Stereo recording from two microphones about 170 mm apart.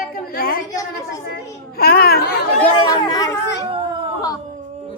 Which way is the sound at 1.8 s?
65° left (ahead or behind).